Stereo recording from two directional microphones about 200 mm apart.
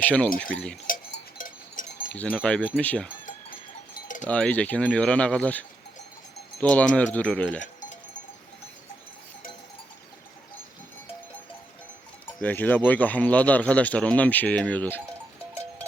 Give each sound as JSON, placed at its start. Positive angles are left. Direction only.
{"t": 0.0, "sound": "speech", "side_deg": 5}
{"t": 0.9, "sound": "cowbell", "side_deg": 45}
{"t": 2.1, "sound": "speech", "side_deg": 5}
{"t": 4.3, "sound": "speech", "side_deg": 5}
{"t": 7.6, "sound": "cowbell", "side_deg": 40}
{"t": 12.4, "sound": "speech", "side_deg": 10}